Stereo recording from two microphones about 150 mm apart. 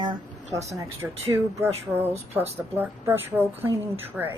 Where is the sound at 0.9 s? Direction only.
20° right (ahead or behind).